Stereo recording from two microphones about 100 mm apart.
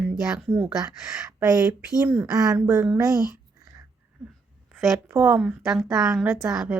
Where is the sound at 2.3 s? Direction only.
40° right (ahead or behind).